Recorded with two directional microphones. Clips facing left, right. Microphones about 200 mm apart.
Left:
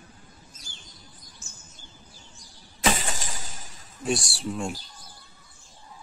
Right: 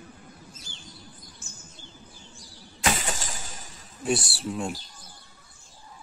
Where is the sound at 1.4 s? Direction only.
55° right (ahead or behind).